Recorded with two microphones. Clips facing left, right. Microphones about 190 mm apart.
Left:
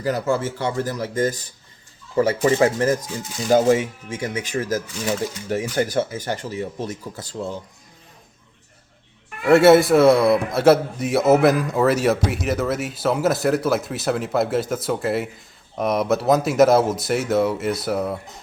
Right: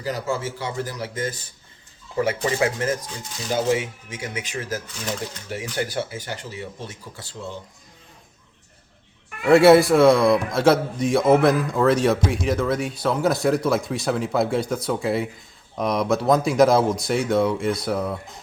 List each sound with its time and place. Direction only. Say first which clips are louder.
0.0 s speech: left 5 dB; 50° left (ahead or behind)
9.4 s a man's voice: even; centre (ahead or behind)